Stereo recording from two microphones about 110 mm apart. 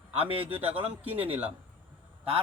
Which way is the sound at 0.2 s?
60° right (ahead or behind).